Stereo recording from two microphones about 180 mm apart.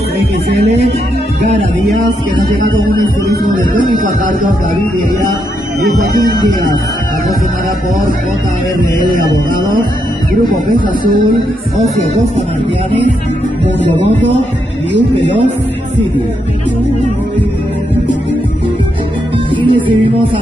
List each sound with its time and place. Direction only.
1.4 s music: 40° right (ahead or behind)
3.7 s speech: 50° right (ahead or behind)
19.5 s music: 30° right (ahead or behind)